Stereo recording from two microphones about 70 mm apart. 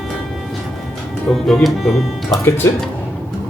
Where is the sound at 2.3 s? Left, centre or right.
Left.